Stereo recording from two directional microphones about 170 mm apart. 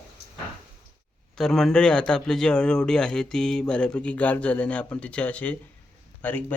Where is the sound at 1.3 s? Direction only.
5° left (ahead or behind).